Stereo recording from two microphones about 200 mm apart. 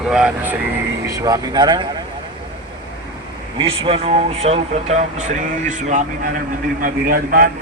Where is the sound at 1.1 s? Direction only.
15° right (ahead or behind).